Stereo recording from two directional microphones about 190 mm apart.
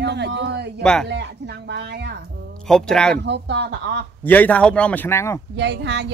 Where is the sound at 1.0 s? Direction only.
65° right (ahead or behind).